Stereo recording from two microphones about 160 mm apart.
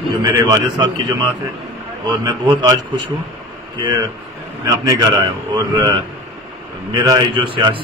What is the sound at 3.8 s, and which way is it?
A man's voice, 25° right (ahead or behind).